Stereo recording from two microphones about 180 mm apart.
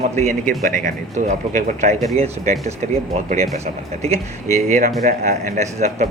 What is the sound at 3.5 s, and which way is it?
Speech, 35° right (ahead or behind).